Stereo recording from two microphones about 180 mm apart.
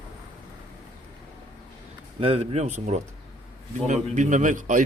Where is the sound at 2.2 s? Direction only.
35° right (ahead or behind).